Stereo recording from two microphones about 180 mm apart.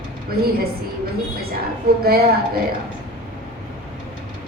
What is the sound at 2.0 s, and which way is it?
Speech, 60° right (ahead or behind).